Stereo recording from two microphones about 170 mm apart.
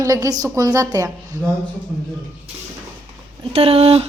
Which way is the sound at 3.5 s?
35° right (ahead or behind).